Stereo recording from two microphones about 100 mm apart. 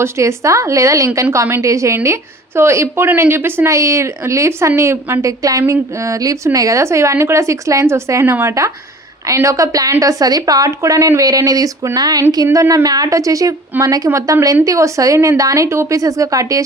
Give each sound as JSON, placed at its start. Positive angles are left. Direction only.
{"t": 0.0, "sound": "a woman's voice", "side_deg": -30}